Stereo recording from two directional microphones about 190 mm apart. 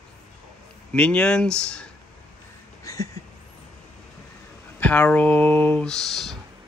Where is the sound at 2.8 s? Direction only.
15° left (ahead or behind).